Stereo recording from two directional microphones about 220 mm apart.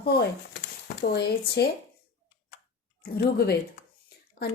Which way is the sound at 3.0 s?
45° left (ahead or behind).